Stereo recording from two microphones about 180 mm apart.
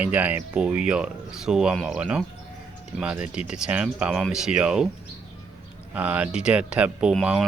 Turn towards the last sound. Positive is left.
turn(degrees=-5)  # may be behind; listen again after turning